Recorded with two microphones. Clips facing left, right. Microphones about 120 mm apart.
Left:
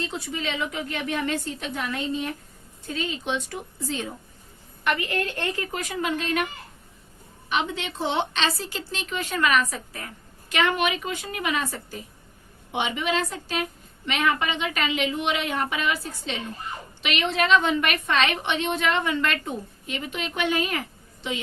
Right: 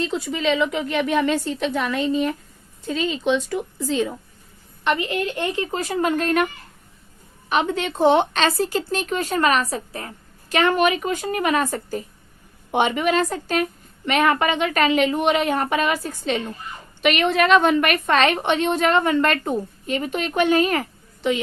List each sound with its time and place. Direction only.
0.3 s a woman's voice: 90° right
4.8 s a woman's voice: 25° right (ahead or behind)
5.7 s a woman's voice: 35° right (ahead or behind)
7.5 s a woman's voice: 45° right (ahead or behind)